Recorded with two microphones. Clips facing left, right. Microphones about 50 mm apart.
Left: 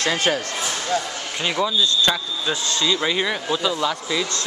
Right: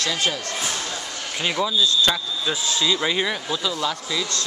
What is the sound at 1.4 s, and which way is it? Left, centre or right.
Speech, centre.